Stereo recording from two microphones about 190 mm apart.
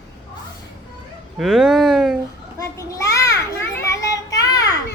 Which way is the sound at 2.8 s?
15° left (ahead or behind).